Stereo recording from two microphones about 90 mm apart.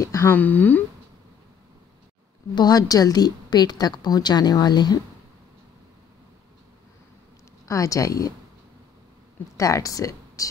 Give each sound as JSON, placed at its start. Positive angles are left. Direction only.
{"t": 0.0, "sound": "speech", "side_deg": 35}
{"t": 0.3, "sound": "speech", "side_deg": 20}
{"t": 2.5, "sound": "a woman's voice", "side_deg": 45}
{"t": 7.6, "sound": "a woman's voice", "side_deg": 40}
{"t": 9.6, "sound": "speech", "side_deg": 35}